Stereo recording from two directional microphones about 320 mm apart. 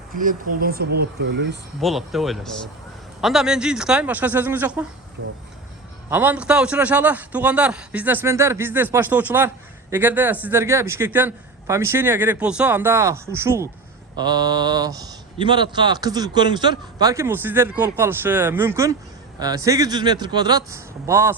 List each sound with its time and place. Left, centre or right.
0.1 s speech: right
1.8 s a man's voice: centre
6.1 s a man's voice: centre